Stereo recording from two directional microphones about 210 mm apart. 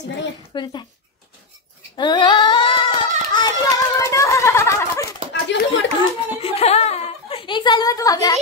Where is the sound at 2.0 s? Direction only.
20° left (ahead or behind).